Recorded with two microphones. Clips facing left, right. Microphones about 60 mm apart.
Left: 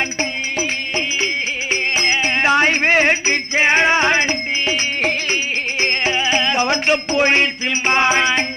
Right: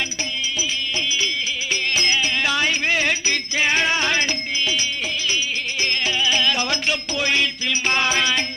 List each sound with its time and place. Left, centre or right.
0.2 s music: left